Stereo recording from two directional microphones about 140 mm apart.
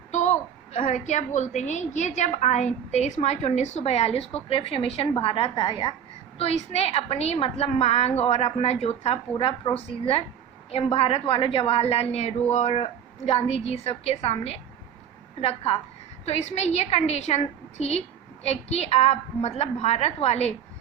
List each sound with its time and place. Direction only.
0.1 s a woman's voice: 55° left (ahead or behind); by 5.9 s 35° left (ahead or behind)
6.4 s a woman's voice: 50° left (ahead or behind)